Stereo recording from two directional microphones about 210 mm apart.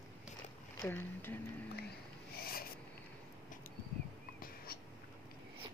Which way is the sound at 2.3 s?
45° left (ahead or behind).